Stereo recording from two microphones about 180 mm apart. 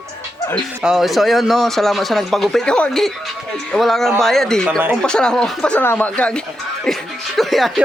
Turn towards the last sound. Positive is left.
turn(degrees=0)  # may be behind; listen again after turning